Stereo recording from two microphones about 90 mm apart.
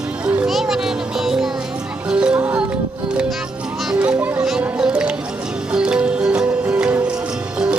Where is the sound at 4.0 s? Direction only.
15° right (ahead or behind).